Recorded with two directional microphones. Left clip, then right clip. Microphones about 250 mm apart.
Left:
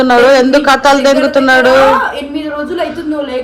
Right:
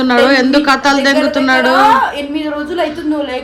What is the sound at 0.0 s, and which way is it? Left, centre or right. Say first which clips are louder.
Speech: left 4 dB; centre.